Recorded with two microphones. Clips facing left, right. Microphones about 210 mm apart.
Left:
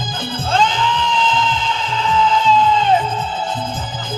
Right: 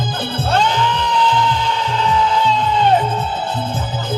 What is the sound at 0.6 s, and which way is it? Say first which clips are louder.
Music: right 1 dB; 65° right (ahead or behind).